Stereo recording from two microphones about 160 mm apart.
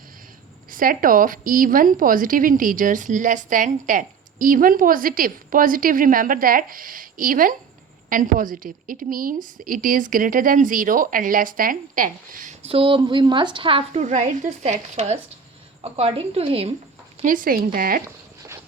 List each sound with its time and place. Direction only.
0.7 s a woman's voice: 60° right (ahead or behind)
12.6 s speech: 35° right (ahead or behind)
14.0 s a woman's voice: 50° right (ahead or behind)
17.2 s a woman's voice: 60° right (ahead or behind)
18.0 s a sound: 15° right (ahead or behind)